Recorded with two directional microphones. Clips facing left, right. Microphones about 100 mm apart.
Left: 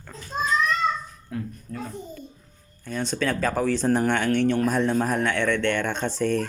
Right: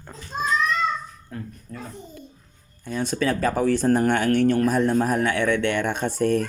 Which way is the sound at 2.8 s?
5° right (ahead or behind).